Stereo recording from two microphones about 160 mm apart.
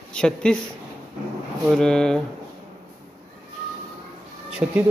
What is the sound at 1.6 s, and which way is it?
Speech, 5° left (ahead or behind).